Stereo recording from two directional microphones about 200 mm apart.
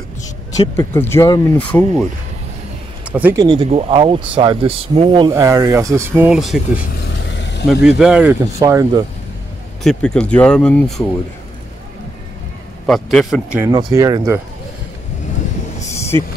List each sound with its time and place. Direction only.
0.7 s speech: 10° left (ahead or behind)
3.1 s speech: 10° right (ahead or behind)
3.4 s speech: 30° right (ahead or behind)
5.3 s speech: 15° right (ahead or behind)
7.3 s vehicle: 60° left (ahead or behind)
7.8 s speech: 5° right (ahead or behind)
8.5 s speech: 15° right (ahead or behind)
9.8 s speech: 5° left (ahead or behind)
12.8 s speech: centre (ahead or behind)
13.7 s speech: 20° right (ahead or behind)